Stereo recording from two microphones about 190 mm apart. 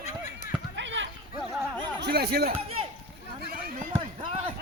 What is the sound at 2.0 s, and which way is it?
Speech, 60° right (ahead or behind).